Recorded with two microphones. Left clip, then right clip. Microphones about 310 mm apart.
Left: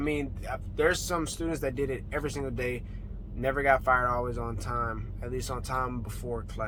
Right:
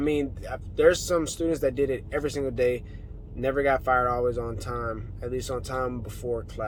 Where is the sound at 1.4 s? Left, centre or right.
Left.